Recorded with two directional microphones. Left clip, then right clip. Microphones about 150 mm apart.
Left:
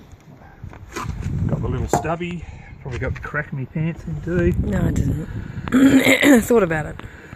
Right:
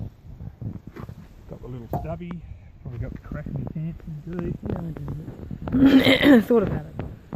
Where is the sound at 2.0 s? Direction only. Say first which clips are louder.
Left 10 dB; 25° left (ahead or behind).